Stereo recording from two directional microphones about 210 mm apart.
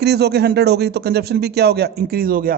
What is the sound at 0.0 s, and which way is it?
Speech, 50° right (ahead or behind).